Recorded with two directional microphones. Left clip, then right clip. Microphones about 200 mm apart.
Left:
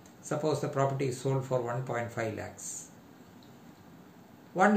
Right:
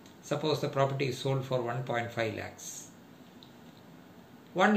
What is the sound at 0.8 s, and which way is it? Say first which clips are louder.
Speech: right 1 dB; 5° left (ahead or behind).